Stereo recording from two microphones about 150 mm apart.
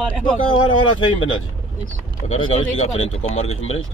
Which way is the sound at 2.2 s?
40° left (ahead or behind).